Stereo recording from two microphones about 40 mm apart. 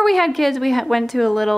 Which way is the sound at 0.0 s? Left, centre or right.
Centre.